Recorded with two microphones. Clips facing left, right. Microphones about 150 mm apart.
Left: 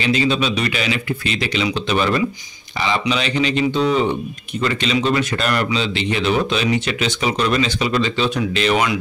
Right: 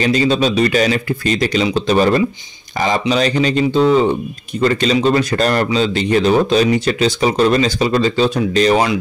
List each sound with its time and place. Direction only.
0.0 s speech: 40° right (ahead or behind)